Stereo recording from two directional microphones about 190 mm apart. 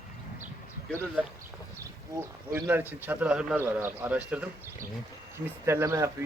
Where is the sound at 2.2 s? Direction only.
10° right (ahead or behind).